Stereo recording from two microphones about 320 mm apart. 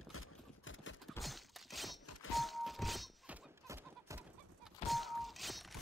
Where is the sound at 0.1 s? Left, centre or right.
Left.